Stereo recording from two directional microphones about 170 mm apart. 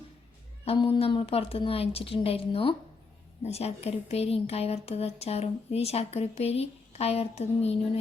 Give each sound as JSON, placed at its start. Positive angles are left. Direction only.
{"t": 0.6, "sound": "speech", "side_deg": 35}